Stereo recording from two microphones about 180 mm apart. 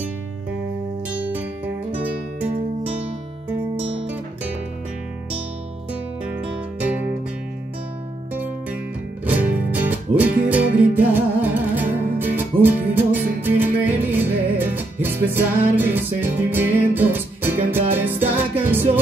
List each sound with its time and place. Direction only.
3.8 s music: 30° right (ahead or behind)
6.8 s music: 10° right (ahead or behind)
9.2 s music: 10° right (ahead or behind)